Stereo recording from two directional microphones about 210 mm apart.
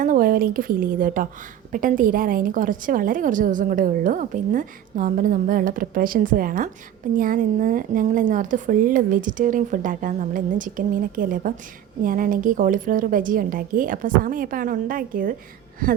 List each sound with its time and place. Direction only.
0.0 s a woman's voice: 40° right (ahead or behind)